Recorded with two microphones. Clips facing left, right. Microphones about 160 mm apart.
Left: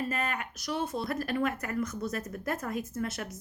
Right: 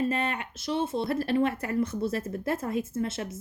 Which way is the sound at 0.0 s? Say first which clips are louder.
Right 5 dB; 30° right (ahead or behind).